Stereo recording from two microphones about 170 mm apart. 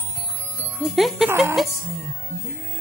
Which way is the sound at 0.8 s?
Centre (ahead or behind).